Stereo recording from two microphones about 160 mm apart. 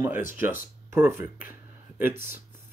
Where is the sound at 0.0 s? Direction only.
15° right (ahead or behind).